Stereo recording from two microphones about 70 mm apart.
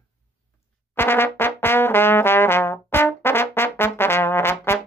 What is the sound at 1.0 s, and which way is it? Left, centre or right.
Trombone, left.